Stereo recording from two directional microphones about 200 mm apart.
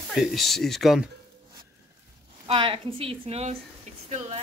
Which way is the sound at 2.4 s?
25° right (ahead or behind).